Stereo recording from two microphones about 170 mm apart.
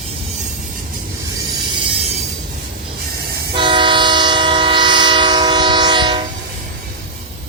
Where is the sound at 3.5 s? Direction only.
30° right (ahead or behind).